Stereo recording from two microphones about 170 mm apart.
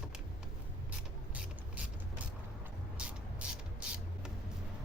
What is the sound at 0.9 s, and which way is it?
Mechanisms, 10° right (ahead or behind).